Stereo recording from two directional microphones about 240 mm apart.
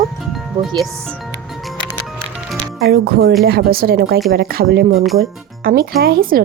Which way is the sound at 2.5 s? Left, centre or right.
Right.